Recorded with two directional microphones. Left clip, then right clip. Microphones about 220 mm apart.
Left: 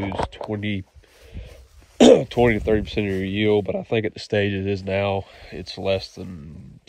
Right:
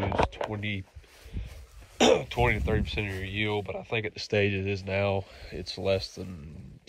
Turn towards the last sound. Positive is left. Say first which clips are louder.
# left 4 dB
turn(degrees=0)  # may be behind; listen again after turning